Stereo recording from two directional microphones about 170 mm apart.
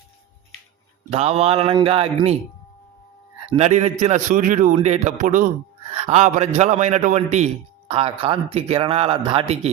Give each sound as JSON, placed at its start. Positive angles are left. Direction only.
{"t": 1.1, "sound": "a man's voice", "side_deg": -40}
{"t": 3.4, "sound": "a man's voice", "side_deg": -35}
{"t": 5.9, "sound": "a man's voice", "side_deg": -35}